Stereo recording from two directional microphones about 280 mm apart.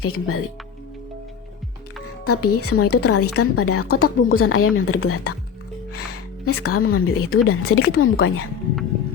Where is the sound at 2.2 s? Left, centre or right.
Left.